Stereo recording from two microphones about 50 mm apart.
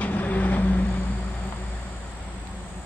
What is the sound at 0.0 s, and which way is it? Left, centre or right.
Vehicle, left.